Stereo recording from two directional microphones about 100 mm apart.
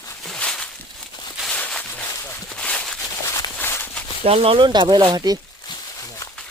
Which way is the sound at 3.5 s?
20° left (ahead or behind).